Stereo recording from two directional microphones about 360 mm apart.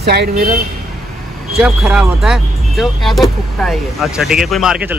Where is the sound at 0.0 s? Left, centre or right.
Right.